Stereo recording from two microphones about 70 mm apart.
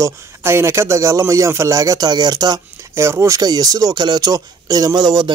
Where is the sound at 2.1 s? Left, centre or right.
Right.